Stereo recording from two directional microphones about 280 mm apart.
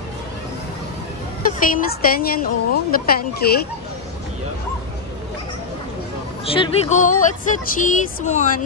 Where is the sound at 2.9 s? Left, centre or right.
Left.